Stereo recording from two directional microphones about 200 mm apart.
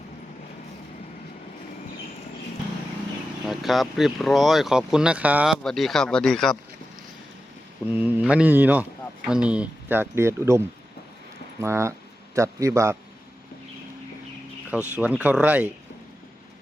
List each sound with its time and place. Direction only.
3.4 s speech: centre (ahead or behind)
7.9 s speech: 10° right (ahead or behind)
11.6 s speech: 15° right (ahead or behind)
14.7 s speech: 5° right (ahead or behind)